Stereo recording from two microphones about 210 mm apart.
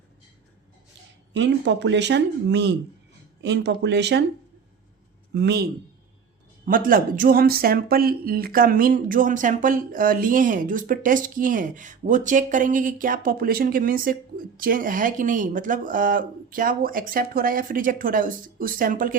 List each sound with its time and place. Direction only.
1.3 s speech: 55° right (ahead or behind)
5.3 s speech: 50° right (ahead or behind)
6.7 s speech: 40° right (ahead or behind)